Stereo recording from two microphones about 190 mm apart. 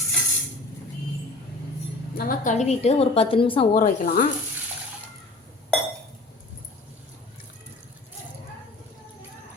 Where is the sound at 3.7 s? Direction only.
45° left (ahead or behind).